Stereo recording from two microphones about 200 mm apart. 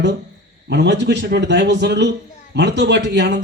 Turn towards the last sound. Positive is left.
turn(degrees=-60)  # may be behind; listen again after turning